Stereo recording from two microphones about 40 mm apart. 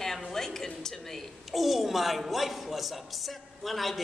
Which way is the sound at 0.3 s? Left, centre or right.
Centre.